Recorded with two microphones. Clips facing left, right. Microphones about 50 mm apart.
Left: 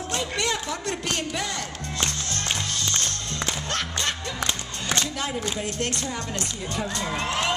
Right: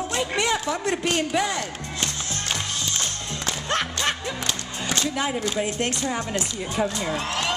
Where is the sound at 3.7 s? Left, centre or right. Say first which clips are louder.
Right 7 dB; centre.